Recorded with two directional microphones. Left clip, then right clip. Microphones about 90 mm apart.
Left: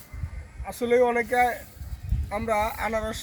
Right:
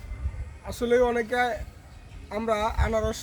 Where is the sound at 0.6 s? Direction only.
20° right (ahead or behind).